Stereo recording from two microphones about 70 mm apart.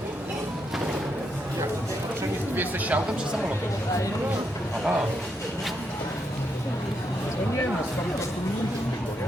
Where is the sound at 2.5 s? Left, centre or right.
Right.